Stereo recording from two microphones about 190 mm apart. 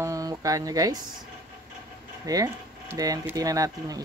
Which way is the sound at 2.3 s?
20° right (ahead or behind).